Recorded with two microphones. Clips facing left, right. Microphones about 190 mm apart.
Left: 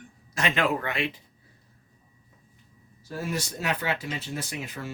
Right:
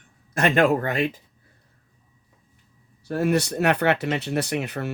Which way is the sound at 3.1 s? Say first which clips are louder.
Right 10 dB; 65° right (ahead or behind).